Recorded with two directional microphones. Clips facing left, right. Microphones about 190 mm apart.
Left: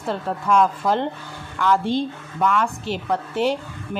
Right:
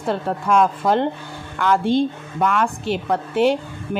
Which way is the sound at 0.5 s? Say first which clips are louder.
Right 1 dB; 55° right (ahead or behind).